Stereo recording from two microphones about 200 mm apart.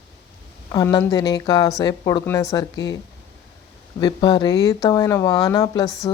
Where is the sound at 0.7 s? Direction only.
20° left (ahead or behind).